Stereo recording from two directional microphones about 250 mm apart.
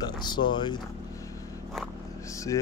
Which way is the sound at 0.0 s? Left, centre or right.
Centre.